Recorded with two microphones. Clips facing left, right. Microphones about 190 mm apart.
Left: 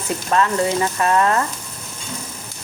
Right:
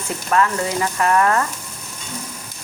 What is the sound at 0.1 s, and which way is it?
Speech, 25° left (ahead or behind).